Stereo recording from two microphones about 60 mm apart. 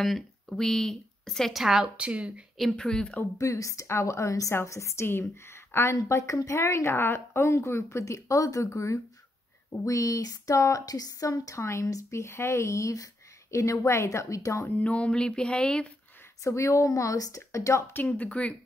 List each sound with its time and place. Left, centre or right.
0.0 s speech: centre
1.6 s a woman's voice: centre
2.0 s speech: centre
2.8 s a sound: centre
3.3 s a woman's voice: left
8.6 s speech: left
11.8 s speech: left
14.8 s a sound: left
16.4 s speech: left
18.4 s speech: left